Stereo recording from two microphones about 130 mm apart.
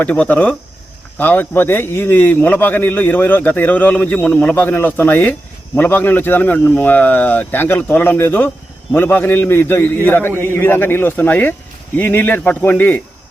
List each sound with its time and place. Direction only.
0.0 s a man's voice: 10° left (ahead or behind)